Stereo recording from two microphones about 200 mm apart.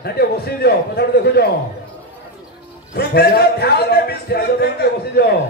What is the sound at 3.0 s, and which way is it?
Speech, 55° left (ahead or behind).